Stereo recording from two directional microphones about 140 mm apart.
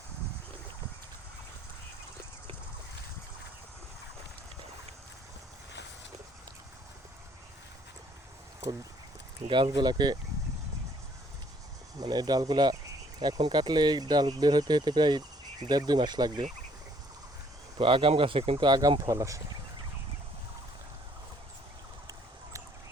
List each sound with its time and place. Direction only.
9.5 s speech: 35° right (ahead or behind)
11.9 s speech: 30° right (ahead or behind)
17.7 s speech: 40° right (ahead or behind)